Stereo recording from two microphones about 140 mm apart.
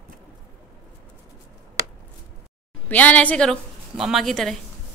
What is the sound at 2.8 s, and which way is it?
A woman's voice, 10° left (ahead or behind).